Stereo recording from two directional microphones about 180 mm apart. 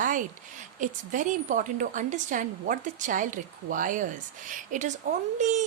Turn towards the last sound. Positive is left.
turn(degrees=-40)  # may be behind; listen again after turning